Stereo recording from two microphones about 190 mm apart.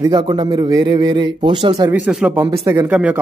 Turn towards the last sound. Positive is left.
turn(degrees=-5)  # may be behind; listen again after turning